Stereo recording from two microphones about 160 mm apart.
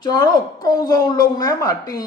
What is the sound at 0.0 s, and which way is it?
Speech, 25° left (ahead or behind).